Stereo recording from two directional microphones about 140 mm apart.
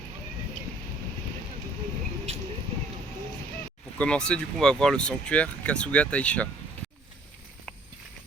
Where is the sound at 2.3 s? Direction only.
50° right (ahead or behind).